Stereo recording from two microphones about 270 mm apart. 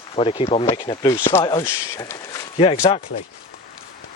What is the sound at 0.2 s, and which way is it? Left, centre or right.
Speech, left.